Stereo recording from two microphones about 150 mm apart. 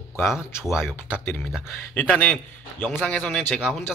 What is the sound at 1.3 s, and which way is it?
Speech, 10° left (ahead or behind).